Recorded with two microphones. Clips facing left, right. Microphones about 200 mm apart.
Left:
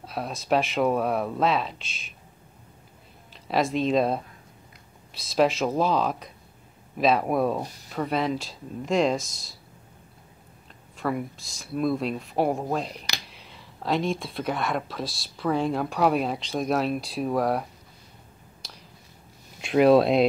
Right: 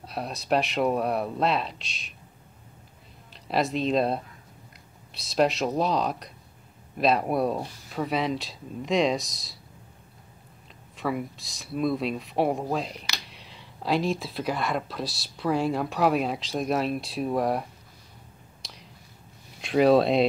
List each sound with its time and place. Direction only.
0.0 s speech: centre (ahead or behind)
3.3 s speech: centre (ahead or behind)
11.0 s speech: centre (ahead or behind)
18.6 s a sound: centre (ahead or behind)
19.6 s speech: centre (ahead or behind)